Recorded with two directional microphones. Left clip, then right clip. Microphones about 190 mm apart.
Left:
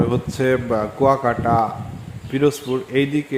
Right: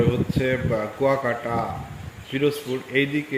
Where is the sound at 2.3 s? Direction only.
25° left (ahead or behind).